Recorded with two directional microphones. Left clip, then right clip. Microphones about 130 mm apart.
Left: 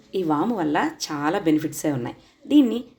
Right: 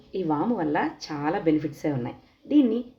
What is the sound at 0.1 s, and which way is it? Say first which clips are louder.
Speech: left 3 dB; 20° left (ahead or behind).